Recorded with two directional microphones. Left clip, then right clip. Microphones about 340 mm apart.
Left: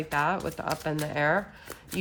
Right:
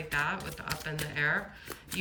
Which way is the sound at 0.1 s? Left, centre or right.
Centre.